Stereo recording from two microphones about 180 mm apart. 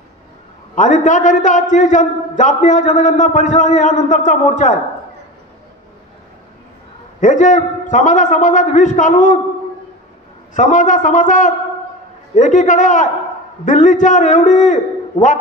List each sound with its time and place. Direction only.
0.7 s a man's voice: 45° left (ahead or behind)
7.2 s a man's voice: 45° left (ahead or behind)
10.5 s a man's voice: 45° left (ahead or behind)